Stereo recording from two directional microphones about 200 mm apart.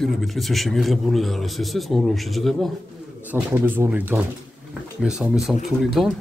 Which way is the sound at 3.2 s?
10° right (ahead or behind).